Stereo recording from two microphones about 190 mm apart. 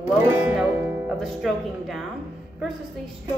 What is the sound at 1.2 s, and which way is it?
Speech, centre (ahead or behind).